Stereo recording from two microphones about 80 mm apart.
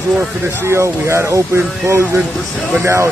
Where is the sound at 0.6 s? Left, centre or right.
Right.